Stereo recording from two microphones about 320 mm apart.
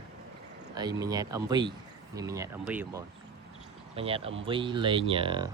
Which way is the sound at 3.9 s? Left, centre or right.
Centre.